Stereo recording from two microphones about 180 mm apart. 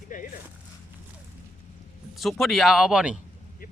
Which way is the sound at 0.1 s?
50° left (ahead or behind).